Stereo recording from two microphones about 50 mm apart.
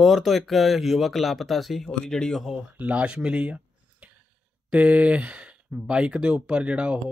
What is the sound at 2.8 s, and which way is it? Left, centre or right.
Speech, right.